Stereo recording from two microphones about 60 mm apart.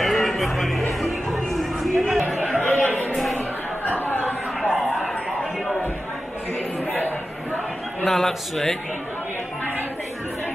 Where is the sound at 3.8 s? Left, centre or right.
Left.